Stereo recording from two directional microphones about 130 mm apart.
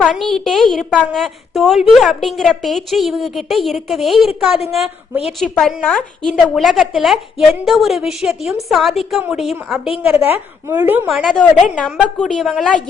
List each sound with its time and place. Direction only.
0.0 s a woman's voice: centre (ahead or behind)
10.1 s speech: 20° right (ahead or behind)
11.1 s a woman's voice: centre (ahead or behind)